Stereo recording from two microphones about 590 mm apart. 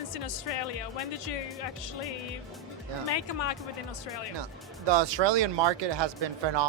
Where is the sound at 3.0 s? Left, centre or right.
Left.